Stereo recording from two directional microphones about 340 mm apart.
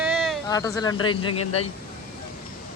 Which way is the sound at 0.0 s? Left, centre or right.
Centre.